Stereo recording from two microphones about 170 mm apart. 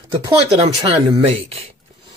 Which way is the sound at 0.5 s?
35° right (ahead or behind).